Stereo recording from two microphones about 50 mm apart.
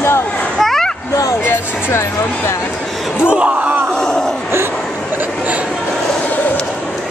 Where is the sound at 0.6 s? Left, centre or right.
Centre.